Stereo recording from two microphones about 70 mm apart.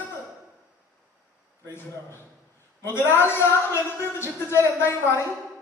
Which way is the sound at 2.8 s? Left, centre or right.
Left.